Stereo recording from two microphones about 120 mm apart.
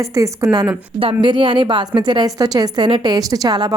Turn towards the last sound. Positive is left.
turn(degrees=-30)  # may be behind; listen again after turning